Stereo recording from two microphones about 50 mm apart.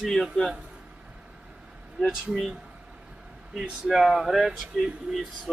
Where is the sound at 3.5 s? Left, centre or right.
Centre.